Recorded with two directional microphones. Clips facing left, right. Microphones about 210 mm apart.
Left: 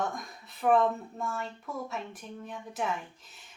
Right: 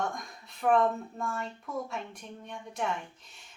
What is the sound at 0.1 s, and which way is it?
A woman's voice, centre (ahead or behind).